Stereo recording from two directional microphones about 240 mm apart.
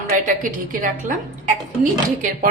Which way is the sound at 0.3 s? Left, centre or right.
Right.